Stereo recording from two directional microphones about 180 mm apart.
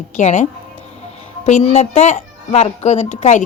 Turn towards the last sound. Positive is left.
turn(degrees=40)  # may be behind; listen again after turning